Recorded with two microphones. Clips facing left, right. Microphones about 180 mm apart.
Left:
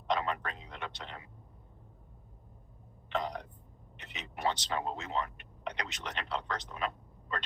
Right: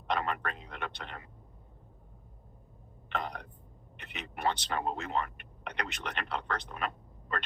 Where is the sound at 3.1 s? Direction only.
55° right (ahead or behind).